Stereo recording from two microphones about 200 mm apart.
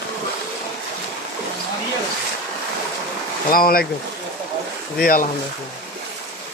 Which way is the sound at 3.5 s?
45° left (ahead or behind).